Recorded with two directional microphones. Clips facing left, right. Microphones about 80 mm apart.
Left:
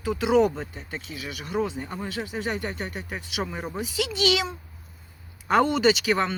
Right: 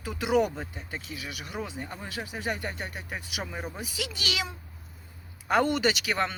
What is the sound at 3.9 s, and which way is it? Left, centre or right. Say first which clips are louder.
Speech: left 12 dB; left.